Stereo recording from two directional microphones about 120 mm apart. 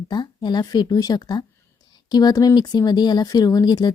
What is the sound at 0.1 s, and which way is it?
Speech, 35° left (ahead or behind).